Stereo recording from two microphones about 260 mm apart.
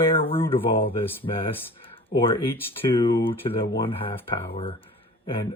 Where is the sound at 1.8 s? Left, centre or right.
Centre.